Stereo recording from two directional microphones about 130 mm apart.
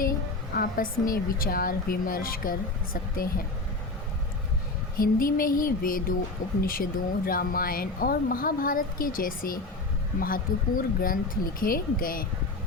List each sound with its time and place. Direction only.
0.6 s speech: 90° left
4.9 s speech: 90° left